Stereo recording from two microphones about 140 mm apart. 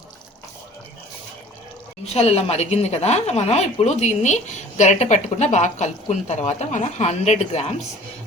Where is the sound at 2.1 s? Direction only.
50° left (ahead or behind).